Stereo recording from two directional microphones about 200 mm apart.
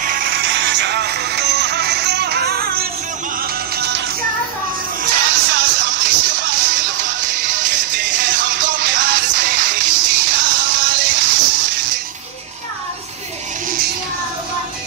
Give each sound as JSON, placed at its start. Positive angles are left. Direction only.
{"t": 0.0, "sound": "music", "side_deg": -45}
{"t": 5.1, "sound": "music", "side_deg": -60}